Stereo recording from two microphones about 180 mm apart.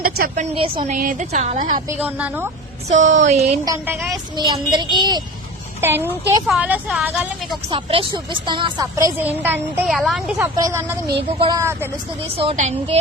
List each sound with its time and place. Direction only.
0.0 s a woman's voice: 55° right (ahead or behind)
0.5 s speech: 30° right (ahead or behind)
0.9 s a woman's voice: 45° right (ahead or behind)
2.0 s a woman's voice: 10° right (ahead or behind)
2.9 s speech: 40° right (ahead or behind)
4.1 s speech: 25° right (ahead or behind)
5.8 s a woman's voice: 10° right (ahead or behind)
7.7 s a woman's voice: 30° right (ahead or behind); by 10.9 s 15° right (ahead or behind)
11.3 s speech: 25° right (ahead or behind)
12.4 s speech: 35° right (ahead or behind)